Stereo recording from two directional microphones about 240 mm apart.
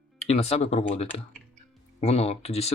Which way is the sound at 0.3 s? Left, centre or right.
Left.